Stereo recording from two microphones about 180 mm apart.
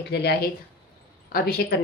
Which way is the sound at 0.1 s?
65° left (ahead or behind).